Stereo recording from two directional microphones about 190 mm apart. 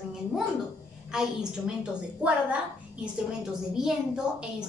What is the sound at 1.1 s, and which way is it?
Speech, 5° right (ahead or behind).